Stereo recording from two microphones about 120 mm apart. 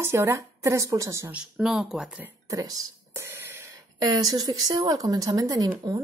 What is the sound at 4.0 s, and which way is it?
Speech, 30° right (ahead or behind).